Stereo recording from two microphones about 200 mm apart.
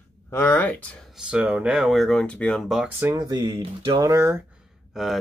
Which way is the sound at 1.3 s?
5° right (ahead or behind).